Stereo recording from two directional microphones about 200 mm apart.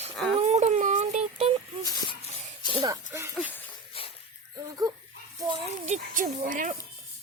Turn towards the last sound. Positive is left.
turn(degrees=-40)  # may be behind; listen again after turning